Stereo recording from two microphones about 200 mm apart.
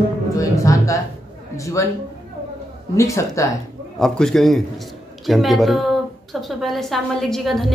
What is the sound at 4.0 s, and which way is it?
A woman's voice, 5° left (ahead or behind).